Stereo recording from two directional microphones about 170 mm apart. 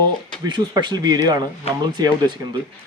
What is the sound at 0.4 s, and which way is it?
Speech, 25° right (ahead or behind).